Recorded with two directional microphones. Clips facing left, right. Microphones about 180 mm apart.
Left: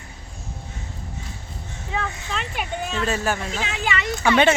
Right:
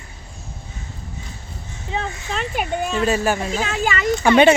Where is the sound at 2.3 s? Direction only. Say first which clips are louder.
Right 6 dB; 45° right (ahead or behind).